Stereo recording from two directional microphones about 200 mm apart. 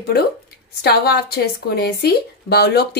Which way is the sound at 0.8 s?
55° left (ahead or behind).